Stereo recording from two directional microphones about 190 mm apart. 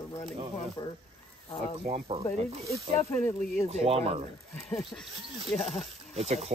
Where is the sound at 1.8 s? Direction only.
30° right (ahead or behind).